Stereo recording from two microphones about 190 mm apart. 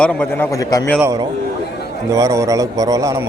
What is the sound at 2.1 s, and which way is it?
A man's voice, 15° right (ahead or behind).